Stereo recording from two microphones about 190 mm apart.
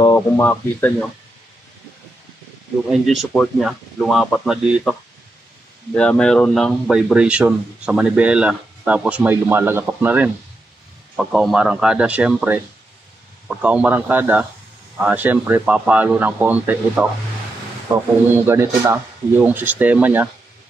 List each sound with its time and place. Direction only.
0.0 s speech: 15° left (ahead or behind)
2.9 s speech: centre (ahead or behind)
5.9 s speech: 5° left (ahead or behind)
18.3 s speech: 15° right (ahead or behind)